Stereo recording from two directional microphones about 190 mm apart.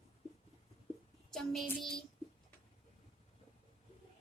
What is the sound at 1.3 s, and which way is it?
Speech, centre (ahead or behind).